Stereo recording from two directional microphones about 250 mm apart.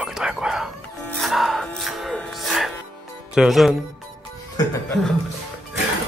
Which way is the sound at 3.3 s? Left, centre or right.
Centre.